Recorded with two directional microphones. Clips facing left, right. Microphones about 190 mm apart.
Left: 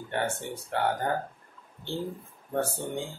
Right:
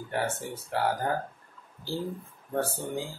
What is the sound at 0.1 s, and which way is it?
Speech, centre (ahead or behind).